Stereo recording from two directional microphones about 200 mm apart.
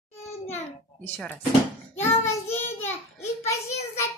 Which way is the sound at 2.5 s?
10° left (ahead or behind).